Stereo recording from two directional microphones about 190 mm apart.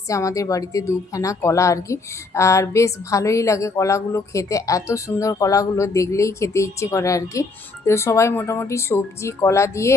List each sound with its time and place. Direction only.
0.1 s a woman's voice: 15° left (ahead or behind)